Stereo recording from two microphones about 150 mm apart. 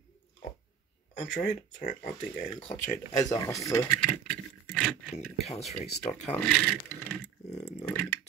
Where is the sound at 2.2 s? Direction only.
40° left (ahead or behind).